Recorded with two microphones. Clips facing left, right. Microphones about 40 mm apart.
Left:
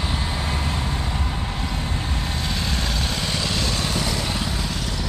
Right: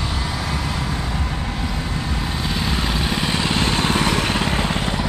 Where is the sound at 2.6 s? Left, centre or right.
Right.